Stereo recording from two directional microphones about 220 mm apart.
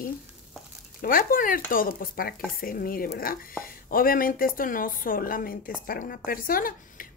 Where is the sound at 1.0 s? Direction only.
40° left (ahead or behind).